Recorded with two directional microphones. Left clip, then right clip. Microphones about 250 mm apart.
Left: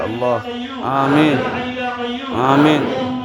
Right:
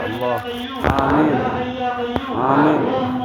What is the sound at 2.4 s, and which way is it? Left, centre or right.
Speech, left.